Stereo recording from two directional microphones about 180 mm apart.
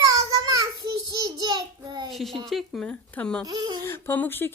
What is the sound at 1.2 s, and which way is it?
Child singing, 25° right (ahead or behind).